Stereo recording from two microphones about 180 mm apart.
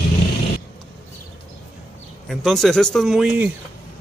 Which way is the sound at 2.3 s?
Centre (ahead or behind).